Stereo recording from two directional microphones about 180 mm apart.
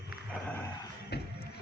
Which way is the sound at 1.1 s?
65° left (ahead or behind).